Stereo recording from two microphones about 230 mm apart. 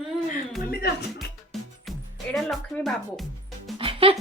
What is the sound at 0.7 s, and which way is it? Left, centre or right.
Speech, left.